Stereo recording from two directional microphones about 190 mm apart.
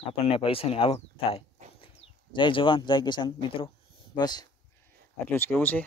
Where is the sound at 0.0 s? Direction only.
30° left (ahead or behind).